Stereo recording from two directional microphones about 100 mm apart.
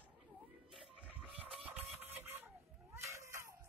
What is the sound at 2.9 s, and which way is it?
Cat, 30° right (ahead or behind).